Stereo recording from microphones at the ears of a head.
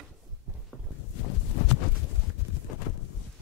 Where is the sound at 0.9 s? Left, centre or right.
Left.